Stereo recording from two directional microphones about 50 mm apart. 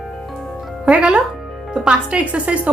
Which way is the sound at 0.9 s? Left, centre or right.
Right.